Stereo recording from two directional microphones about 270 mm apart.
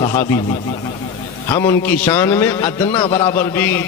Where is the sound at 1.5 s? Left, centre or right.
Centre.